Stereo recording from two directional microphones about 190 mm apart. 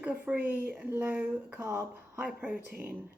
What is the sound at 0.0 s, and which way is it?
Speech, 5° right (ahead or behind).